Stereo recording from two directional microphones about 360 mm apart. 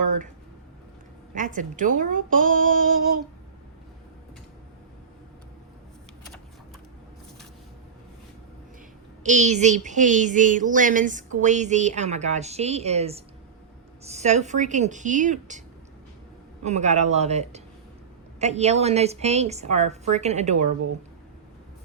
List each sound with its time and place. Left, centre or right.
0.0 s a sound: right
1.3 s speech: right
9.2 s speech: centre
16.6 s a woman's voice: centre